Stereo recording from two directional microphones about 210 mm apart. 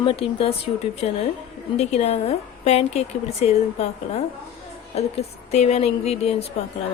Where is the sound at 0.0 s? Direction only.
25° left (ahead or behind).